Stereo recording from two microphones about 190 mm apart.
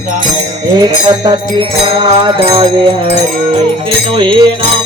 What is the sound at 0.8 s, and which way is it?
Music, 20° right (ahead or behind).